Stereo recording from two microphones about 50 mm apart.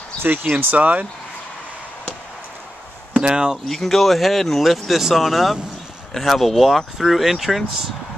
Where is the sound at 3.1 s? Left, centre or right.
Centre.